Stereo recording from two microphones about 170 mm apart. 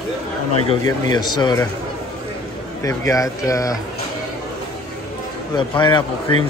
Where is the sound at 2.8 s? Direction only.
20° left (ahead or behind).